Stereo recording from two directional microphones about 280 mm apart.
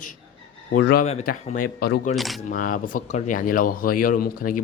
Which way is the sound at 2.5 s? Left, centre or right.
Left.